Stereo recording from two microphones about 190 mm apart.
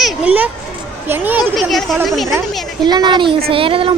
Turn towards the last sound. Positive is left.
turn(degrees=-30)  # may be behind; listen again after turning